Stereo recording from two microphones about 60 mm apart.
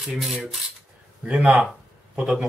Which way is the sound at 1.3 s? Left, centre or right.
Right.